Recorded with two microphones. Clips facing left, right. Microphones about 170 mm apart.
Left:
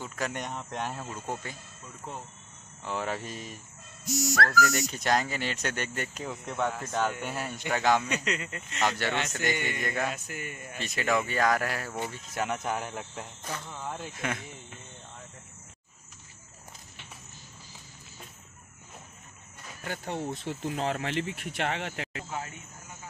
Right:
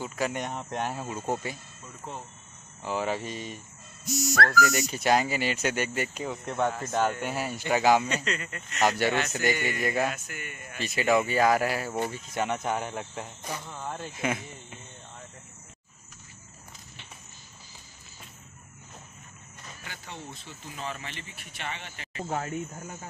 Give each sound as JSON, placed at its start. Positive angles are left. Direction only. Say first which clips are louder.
{"t": 0.0, "sound": "speech", "louder": "right 4 dB", "side_deg": -5}
{"t": 2.8, "sound": "speech", "louder": "right 3 dB", "side_deg": -5}
{"t": 8.1, "sound": "speech", "louder": "even", "side_deg": 15}
{"t": 8.8, "sound": "speech", "louder": "right 4 dB", "side_deg": -10}
{"t": 10.2, "sound": "a man's voice", "louder": "left 2 dB", "side_deg": 30}
{"t": 10.8, "sound": "speech", "louder": "right 4 dB", "side_deg": -5}
{"t": 19.8, "sound": "speech", "louder": "left 10 dB", "side_deg": 50}